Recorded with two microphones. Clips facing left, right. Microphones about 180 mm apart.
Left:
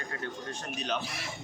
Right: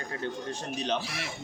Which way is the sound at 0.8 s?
30° right (ahead or behind).